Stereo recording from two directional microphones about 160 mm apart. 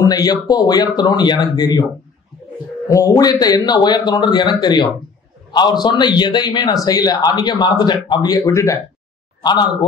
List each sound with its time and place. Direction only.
0.0 s a man's voice: 25° left (ahead or behind)
2.9 s a man's voice: 20° left (ahead or behind)